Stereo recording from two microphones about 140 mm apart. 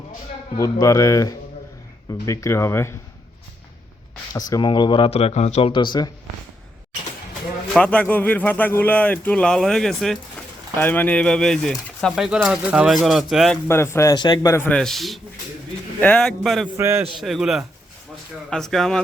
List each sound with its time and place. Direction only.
0.5 s a man's voice: 25° left (ahead or behind)
4.4 s speech: 30° left (ahead or behind); by 5.7 s 50° left (ahead or behind)
5.7 s speech: 35° left (ahead or behind)
7.8 s speech: 10° left (ahead or behind)
10.8 s speech: 10° left (ahead or behind)
13.7 s a man's voice: 20° left (ahead or behind)
14.5 s speech: 15° left (ahead or behind)
14.8 s speech: centre (ahead or behind)
16.7 s a man's voice: 15° right (ahead or behind)
17.1 s speech: centre (ahead or behind)